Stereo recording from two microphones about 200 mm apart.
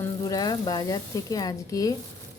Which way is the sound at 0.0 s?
20° left (ahead or behind).